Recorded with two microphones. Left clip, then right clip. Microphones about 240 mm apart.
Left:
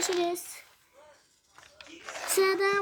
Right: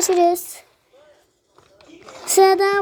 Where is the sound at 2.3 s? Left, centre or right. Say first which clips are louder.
Right 11 dB; centre.